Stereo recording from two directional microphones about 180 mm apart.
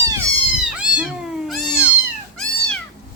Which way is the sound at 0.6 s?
5° right (ahead or behind).